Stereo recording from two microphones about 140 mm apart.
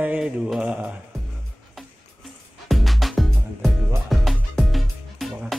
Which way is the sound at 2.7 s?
Centre (ahead or behind).